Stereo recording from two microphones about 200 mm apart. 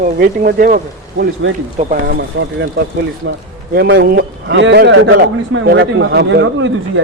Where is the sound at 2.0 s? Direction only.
55° right (ahead or behind).